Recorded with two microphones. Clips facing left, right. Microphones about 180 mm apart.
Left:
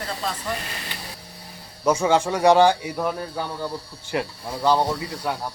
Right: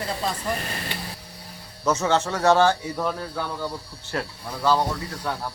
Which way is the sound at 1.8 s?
10° left (ahead or behind).